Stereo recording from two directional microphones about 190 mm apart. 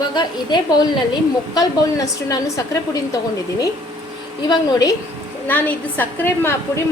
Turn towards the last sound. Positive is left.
turn(degrees=10)  # may be behind; listen again after turning